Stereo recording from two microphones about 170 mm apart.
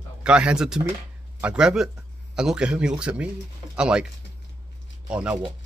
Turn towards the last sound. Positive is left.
turn(degrees=-5)  # may be behind; listen again after turning